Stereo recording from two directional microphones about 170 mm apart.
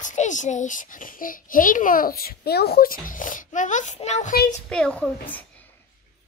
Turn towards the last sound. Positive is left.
turn(degrees=10)  # may be behind; listen again after turning